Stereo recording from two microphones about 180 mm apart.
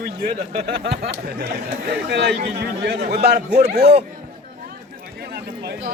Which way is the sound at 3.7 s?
65° right (ahead or behind).